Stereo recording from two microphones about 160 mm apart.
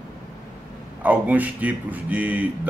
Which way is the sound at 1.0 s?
10° right (ahead or behind).